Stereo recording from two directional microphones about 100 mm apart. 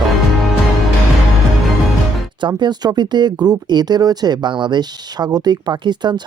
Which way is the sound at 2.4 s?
45° right (ahead or behind).